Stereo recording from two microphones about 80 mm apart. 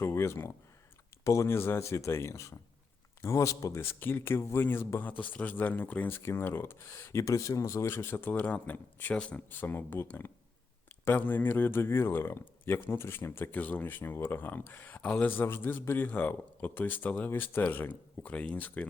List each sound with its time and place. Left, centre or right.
0.0 s speech: left
3.8 s speech: left